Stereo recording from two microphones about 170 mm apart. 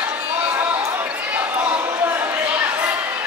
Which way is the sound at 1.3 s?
10° right (ahead or behind).